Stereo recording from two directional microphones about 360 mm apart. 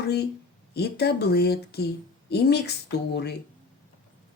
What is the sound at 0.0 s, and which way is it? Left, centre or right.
Speech, left.